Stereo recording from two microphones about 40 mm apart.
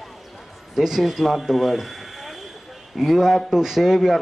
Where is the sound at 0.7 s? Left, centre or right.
Centre.